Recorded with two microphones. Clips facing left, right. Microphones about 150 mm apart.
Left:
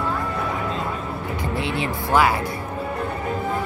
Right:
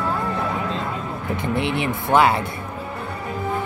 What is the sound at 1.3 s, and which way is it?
Speech, 20° right (ahead or behind).